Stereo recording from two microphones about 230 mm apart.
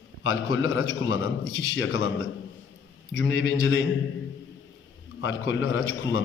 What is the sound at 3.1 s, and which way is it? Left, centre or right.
Speech, left.